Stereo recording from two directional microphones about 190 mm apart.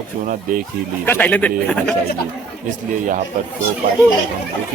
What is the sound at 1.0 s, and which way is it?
Speech, 10° left (ahead or behind).